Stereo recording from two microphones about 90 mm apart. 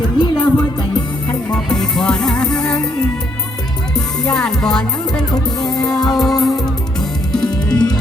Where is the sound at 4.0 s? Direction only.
5° left (ahead or behind).